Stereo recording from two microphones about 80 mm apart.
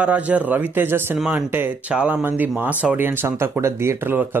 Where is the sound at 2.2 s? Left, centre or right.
Right.